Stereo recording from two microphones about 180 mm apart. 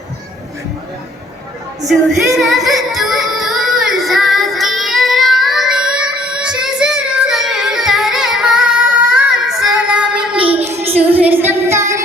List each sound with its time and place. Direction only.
1.9 s music: centre (ahead or behind)
10.3 s child singing: 30° right (ahead or behind)
11.2 s child singing: 10° right (ahead or behind)